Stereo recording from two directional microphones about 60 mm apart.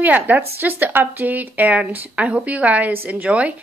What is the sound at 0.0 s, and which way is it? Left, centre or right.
A woman's voice, right.